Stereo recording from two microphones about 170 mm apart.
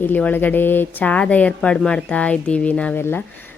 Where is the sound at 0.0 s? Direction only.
10° left (ahead or behind).